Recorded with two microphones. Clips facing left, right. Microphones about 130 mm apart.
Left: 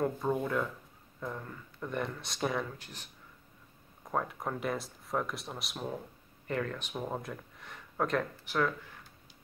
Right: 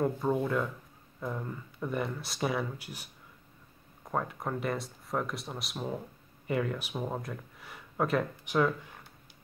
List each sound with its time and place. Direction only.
0.0 s speech: centre (ahead or behind)
1.2 s speech: 10° right (ahead or behind)
4.1 s speech: centre (ahead or behind)
8.5 s speech: 15° right (ahead or behind)